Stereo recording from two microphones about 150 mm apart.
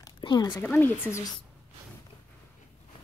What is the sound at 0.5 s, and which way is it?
Speech, 10° left (ahead or behind).